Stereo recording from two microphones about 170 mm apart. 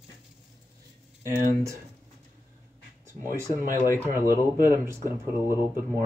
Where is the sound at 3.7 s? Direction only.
15° left (ahead or behind).